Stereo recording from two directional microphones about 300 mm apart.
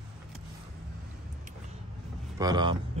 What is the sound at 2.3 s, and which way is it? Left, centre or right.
Speech, centre.